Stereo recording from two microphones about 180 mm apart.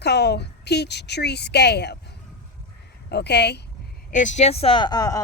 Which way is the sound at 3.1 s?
70° left (ahead or behind).